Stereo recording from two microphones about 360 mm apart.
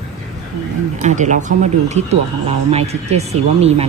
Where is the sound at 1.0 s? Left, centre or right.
Centre.